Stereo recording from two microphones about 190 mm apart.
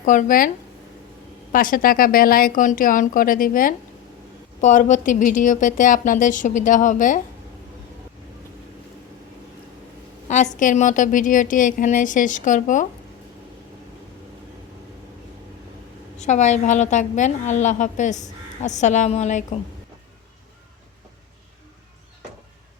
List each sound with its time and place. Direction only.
0.0 s a woman's voice: 45° left (ahead or behind)
1.5 s a woman's voice: 50° left (ahead or behind)
10.2 s a woman's voice: 40° left (ahead or behind)
16.1 s a woman's voice: 40° left (ahead or behind)